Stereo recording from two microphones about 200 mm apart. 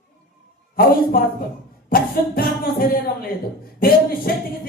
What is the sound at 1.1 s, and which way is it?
Speech, 50° left (ahead or behind).